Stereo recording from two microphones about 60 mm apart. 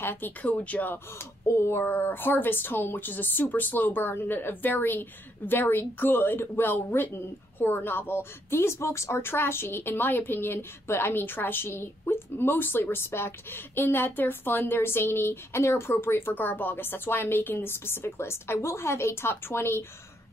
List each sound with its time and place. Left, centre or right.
0.0 s speech: left
1.5 s a woman's voice: left